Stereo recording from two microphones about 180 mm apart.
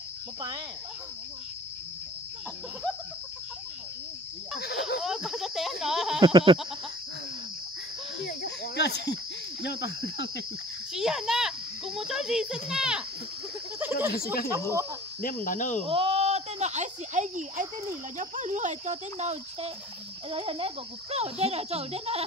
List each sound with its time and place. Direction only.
4.6 s cricket: 65° left (ahead or behind)
5.0 s speech: centre (ahead or behind)
6.2 s goat: 25° right (ahead or behind)
8.2 s cricket: 60° left (ahead or behind)
10.9 s a child's voice: 5° right (ahead or behind)
13.7 s snake: 10° right (ahead or behind)
14.1 s speech: 55° left (ahead or behind)
15.9 s speech: 35° right (ahead or behind)